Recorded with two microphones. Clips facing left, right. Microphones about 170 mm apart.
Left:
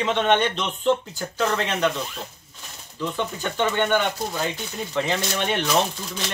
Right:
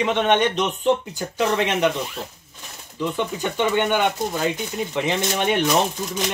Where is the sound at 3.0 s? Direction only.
15° right (ahead or behind).